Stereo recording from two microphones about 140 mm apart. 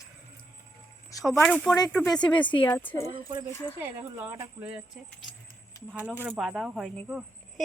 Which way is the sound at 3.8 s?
15° right (ahead or behind).